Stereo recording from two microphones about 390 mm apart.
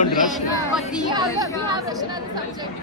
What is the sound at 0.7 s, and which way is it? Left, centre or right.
Speech, centre.